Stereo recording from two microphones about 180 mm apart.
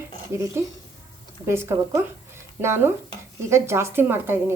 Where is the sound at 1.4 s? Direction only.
15° right (ahead or behind).